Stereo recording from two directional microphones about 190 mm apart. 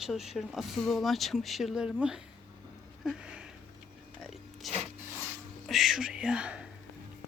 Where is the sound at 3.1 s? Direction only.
5° right (ahead or behind).